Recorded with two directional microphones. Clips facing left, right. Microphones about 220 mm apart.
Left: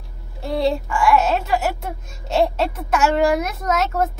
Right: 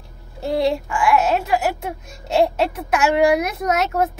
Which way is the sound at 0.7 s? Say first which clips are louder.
Left 4 dB; 5° right (ahead or behind).